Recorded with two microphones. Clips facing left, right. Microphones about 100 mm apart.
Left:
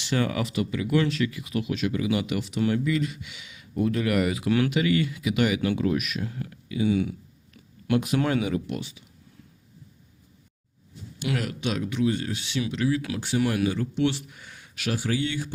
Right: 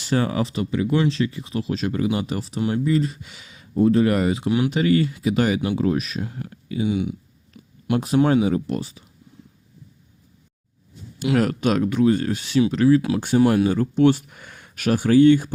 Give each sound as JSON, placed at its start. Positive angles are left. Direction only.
{"t": 0.0, "sound": "speech", "side_deg": -35}
{"t": 4.7, "sound": "speech", "side_deg": -35}
{"t": 6.8, "sound": "a sound", "side_deg": -20}
{"t": 7.9, "sound": "speech", "side_deg": -35}
{"t": 11.3, "sound": "speech", "side_deg": -45}
{"t": 13.4, "sound": "speech", "side_deg": -35}